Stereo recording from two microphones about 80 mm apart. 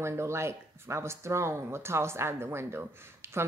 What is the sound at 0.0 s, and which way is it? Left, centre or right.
Speech, right.